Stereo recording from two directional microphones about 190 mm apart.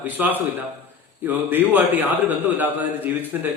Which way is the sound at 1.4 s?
10° right (ahead or behind).